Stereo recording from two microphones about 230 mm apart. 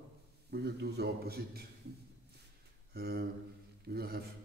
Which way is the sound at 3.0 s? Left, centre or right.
Right.